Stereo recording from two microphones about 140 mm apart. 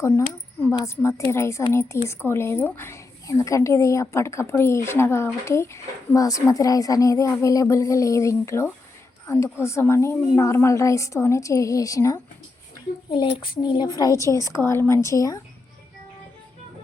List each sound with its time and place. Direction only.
0.0 s a woman's voice: 20° left (ahead or behind)
13.1 s a woman's voice: 35° left (ahead or behind)